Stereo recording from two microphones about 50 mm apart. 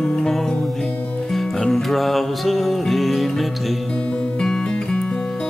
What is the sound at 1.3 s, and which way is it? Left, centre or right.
Music, centre.